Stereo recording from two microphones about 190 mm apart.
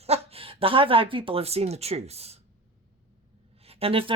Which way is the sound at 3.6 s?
30° right (ahead or behind).